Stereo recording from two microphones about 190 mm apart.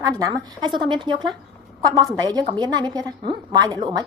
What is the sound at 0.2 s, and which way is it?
Speech, 20° right (ahead or behind).